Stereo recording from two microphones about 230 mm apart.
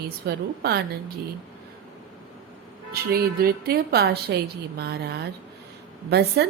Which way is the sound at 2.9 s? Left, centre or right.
Right.